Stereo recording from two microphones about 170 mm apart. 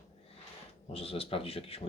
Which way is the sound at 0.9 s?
35° left (ahead or behind).